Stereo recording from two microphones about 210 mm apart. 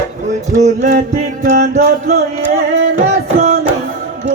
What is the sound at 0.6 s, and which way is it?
Music, 35° right (ahead or behind).